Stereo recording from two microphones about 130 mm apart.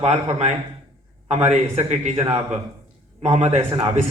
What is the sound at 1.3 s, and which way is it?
Speech, 55° right (ahead or behind).